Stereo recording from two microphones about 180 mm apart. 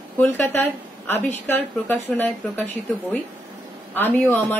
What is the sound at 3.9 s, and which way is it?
Speech, 10° left (ahead or behind).